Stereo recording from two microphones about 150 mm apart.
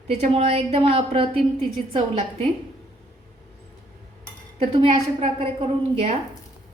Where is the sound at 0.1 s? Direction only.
45° right (ahead or behind).